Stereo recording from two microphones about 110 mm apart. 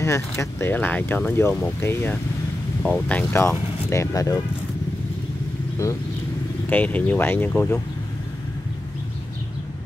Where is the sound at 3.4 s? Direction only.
25° left (ahead or behind).